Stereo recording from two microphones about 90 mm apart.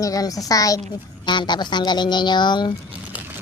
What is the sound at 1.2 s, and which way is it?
A woman's voice, 55° left (ahead or behind).